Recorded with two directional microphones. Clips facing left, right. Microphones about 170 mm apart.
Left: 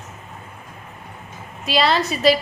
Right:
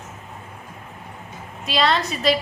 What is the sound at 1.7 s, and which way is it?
Speech, centre (ahead or behind).